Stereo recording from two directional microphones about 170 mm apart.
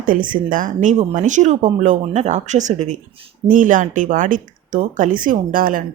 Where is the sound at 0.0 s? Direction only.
55° right (ahead or behind).